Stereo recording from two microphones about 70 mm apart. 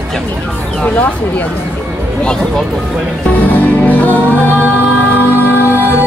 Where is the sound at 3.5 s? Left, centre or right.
Left.